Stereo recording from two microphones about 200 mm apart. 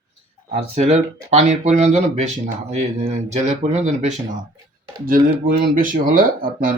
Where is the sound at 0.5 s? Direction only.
35° right (ahead or behind).